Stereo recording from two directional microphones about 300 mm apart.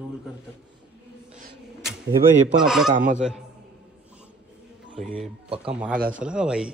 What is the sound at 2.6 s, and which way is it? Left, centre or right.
Speech, centre.